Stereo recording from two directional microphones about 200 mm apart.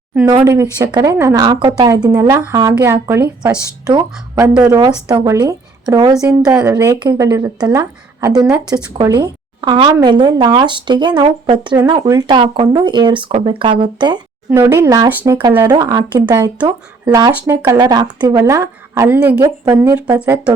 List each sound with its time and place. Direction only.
0.3 s a woman's voice: 15° right (ahead or behind)